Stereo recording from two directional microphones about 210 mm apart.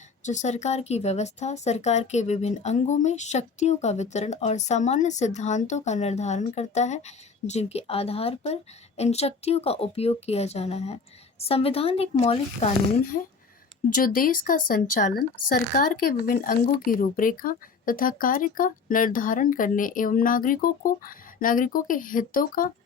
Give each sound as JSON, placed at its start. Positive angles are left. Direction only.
{"t": 0.2, "sound": "speech", "side_deg": 35}
{"t": 13.9, "sound": "speech", "side_deg": 40}